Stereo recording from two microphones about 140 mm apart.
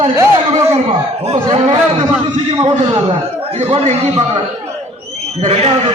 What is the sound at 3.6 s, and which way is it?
Speech, 45° right (ahead or behind).